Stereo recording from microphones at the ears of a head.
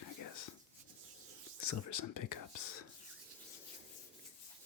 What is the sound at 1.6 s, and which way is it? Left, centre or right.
Speech, left.